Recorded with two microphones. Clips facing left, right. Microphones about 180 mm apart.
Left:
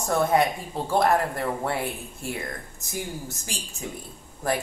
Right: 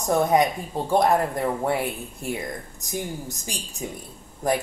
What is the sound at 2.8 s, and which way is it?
Speech, 15° right (ahead or behind).